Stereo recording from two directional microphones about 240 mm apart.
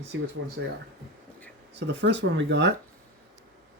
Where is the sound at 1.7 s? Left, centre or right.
Right.